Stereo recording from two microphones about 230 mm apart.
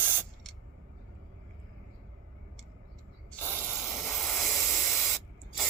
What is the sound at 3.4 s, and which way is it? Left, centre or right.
Spray, centre.